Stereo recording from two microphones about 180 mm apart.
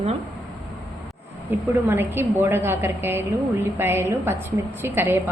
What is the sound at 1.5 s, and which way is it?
A woman's voice, 10° right (ahead or behind).